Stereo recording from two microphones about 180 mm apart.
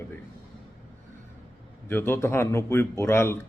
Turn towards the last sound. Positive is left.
turn(degrees=15)  # may be behind; listen again after turning